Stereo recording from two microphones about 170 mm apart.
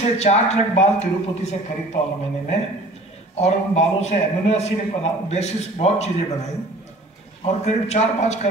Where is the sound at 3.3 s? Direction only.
40° left (ahead or behind).